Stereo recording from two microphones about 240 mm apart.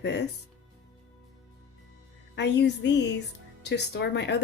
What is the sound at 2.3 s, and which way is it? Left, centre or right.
Speech, left.